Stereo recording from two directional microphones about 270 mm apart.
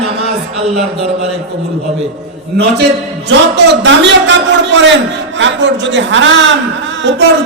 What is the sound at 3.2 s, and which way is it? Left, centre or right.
A man's voice, right.